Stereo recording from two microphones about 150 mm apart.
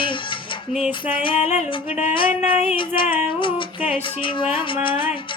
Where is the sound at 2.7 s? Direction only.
35° left (ahead or behind).